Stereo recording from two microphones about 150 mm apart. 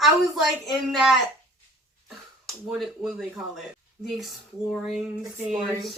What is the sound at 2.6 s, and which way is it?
Speech, 5° right (ahead or behind).